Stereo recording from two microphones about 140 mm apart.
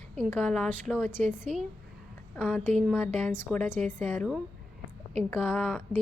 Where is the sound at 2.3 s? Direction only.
10° left (ahead or behind).